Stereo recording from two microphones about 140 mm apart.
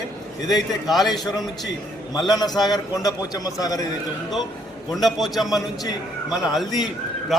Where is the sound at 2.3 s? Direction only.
30° left (ahead or behind).